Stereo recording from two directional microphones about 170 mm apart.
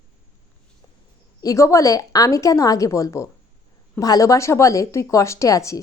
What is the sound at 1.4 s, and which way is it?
A woman's voice, 20° left (ahead or behind).